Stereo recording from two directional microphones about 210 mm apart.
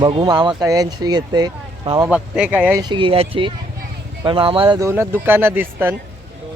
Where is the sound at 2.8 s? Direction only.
20° right (ahead or behind).